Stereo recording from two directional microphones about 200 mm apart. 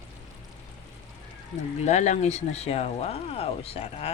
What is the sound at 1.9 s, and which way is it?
Speech, 35° left (ahead or behind).